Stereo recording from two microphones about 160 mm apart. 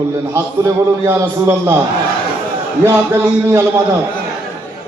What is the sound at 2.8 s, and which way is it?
A man's voice, 20° right (ahead or behind).